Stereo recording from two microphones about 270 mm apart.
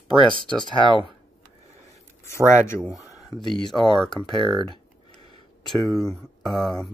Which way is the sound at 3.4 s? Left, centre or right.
Centre.